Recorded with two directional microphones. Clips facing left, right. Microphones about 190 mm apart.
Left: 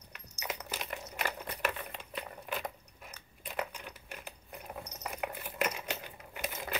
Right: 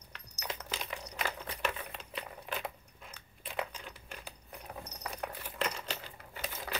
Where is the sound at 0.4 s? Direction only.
10° left (ahead or behind).